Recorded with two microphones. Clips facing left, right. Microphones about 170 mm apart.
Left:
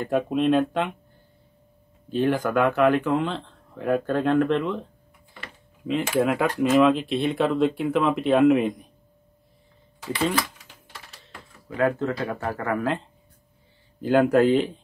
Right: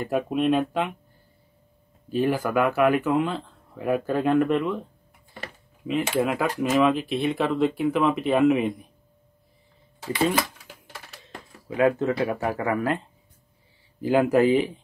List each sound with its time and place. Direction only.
0.0 s a man's voice: 5° right (ahead or behind)
2.0 s a man's voice: 5° right (ahead or behind)
6.1 s a man's voice: centre (ahead or behind)
11.2 s a sound: 15° right (ahead or behind)
12.2 s speech: 15° right (ahead or behind)
14.0 s speech: 5° right (ahead or behind)